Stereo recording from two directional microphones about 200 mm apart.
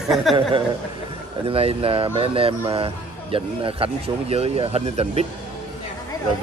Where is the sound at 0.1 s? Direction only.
Centre (ahead or behind).